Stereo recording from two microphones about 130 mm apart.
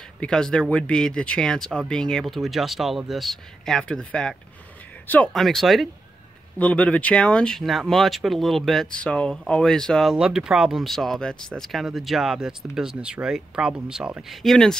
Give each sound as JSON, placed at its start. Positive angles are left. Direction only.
{"t": 0.2, "sound": "speech", "side_deg": 5}
{"t": 5.3, "sound": "speech", "side_deg": 0}